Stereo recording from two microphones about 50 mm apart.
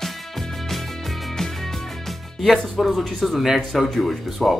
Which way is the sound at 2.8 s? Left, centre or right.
Centre.